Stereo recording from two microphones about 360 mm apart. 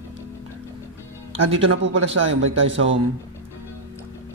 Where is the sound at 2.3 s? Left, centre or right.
Right.